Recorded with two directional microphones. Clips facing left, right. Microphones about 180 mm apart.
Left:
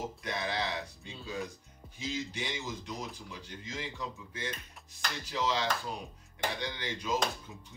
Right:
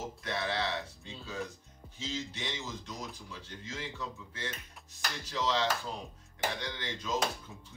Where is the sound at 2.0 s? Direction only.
15° left (ahead or behind).